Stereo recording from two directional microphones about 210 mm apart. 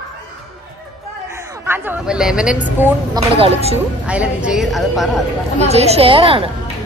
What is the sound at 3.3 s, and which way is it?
Speech, 30° right (ahead or behind).